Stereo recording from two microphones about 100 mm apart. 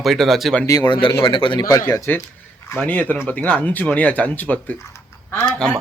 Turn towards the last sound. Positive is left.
turn(degrees=5)  # may be behind; listen again after turning